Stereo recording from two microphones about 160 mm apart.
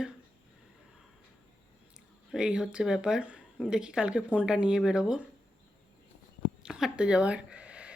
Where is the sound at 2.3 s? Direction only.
5° right (ahead or behind).